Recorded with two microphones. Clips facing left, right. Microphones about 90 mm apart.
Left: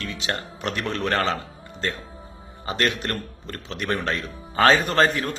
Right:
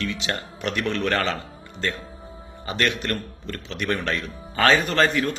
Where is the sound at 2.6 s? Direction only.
35° left (ahead or behind).